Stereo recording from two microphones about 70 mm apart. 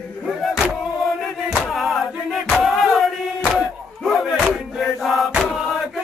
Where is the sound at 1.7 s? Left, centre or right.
Centre.